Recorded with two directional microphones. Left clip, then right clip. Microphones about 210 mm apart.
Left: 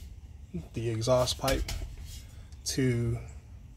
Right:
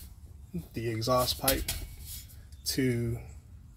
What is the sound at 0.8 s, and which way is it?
Speech, centre (ahead or behind).